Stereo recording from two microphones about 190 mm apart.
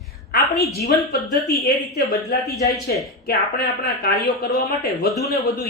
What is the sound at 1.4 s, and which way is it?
Speech, centre (ahead or behind).